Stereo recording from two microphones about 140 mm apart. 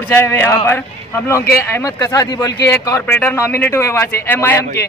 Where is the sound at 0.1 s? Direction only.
20° left (ahead or behind).